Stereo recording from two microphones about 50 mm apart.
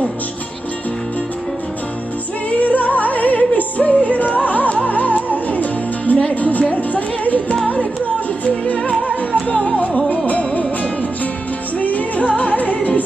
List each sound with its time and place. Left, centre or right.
2.6 s music: left